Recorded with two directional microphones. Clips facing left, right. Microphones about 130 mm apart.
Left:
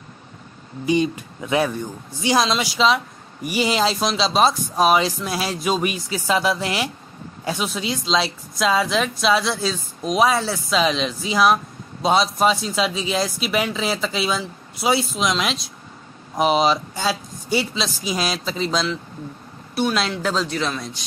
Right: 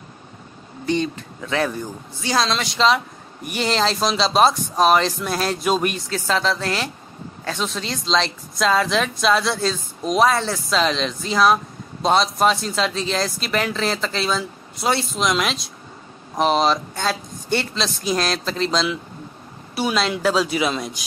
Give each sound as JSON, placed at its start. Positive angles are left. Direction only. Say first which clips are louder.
{"t": 0.8, "sound": "speech", "louder": "left 2 dB", "side_deg": 10}
{"t": 1.7, "sound": "a woman's voice", "louder": "left 1 dB", "side_deg": 0}
{"t": 2.2, "sound": "speech", "louder": "left 2 dB", "side_deg": 15}
{"t": 2.5, "sound": "a woman's voice", "louder": "even", "side_deg": 5}